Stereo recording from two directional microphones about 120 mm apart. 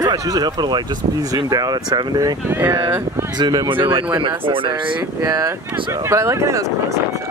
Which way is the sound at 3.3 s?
35° right (ahead or behind).